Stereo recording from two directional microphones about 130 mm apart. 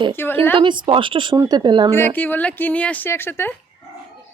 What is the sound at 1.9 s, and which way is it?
A woman's voice, 20° left (ahead or behind).